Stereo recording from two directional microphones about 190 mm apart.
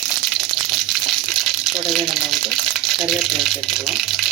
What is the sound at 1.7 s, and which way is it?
Speech, centre (ahead or behind).